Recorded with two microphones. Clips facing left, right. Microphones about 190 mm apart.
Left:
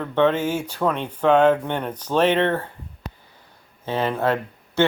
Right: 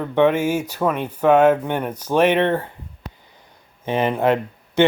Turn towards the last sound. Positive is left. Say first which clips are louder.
# right 3 dB
turn(degrees=-15)  # may be behind; listen again after turning